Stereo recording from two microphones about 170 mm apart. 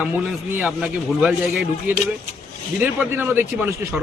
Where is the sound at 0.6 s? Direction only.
Centre (ahead or behind).